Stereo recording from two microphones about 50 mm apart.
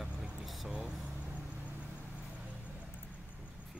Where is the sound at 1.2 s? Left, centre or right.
Right.